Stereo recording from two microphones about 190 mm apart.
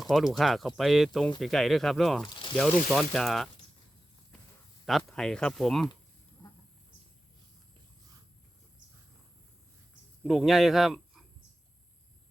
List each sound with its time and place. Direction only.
0.0 s speech: centre (ahead or behind)
2.3 s a sound: 25° left (ahead or behind)
2.6 s speech: centre (ahead or behind)
4.9 s speech: centre (ahead or behind)
10.2 s speech: centre (ahead or behind)